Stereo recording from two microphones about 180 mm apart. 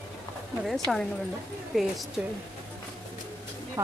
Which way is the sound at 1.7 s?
Centre (ahead or behind).